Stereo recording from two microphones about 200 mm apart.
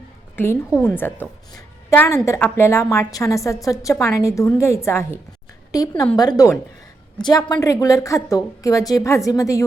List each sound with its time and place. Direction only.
0.4 s a woman's voice: 10° left (ahead or behind)